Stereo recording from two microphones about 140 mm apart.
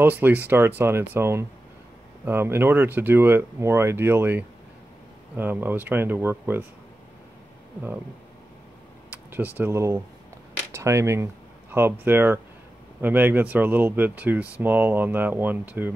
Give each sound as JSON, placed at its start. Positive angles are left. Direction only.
{"t": 0.0, "sound": "speech", "side_deg": -10}
{"t": 9.6, "sound": "speech", "side_deg": -20}